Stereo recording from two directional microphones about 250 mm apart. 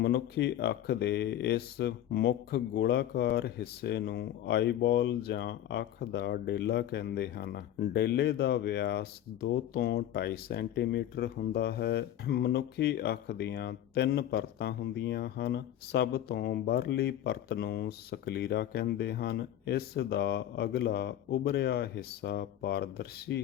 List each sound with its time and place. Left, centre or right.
0.0 s speech: left